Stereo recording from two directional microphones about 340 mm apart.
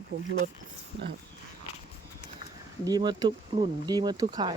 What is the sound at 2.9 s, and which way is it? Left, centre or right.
Speech, centre.